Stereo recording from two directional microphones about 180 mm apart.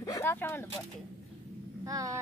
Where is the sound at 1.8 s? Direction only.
20° right (ahead or behind).